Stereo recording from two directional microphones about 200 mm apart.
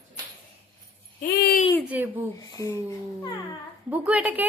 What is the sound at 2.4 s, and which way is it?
Speech, 15° left (ahead or behind).